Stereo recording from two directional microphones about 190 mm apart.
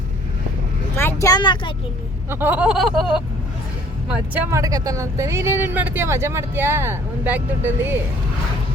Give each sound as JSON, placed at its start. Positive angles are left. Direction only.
{"t": 0.9, "sound": "speech", "side_deg": 15}
{"t": 2.3, "sound": "a sound", "side_deg": -10}
{"t": 4.4, "sound": "speech", "side_deg": -15}